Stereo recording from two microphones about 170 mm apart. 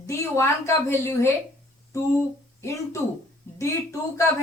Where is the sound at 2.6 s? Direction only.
15° left (ahead or behind).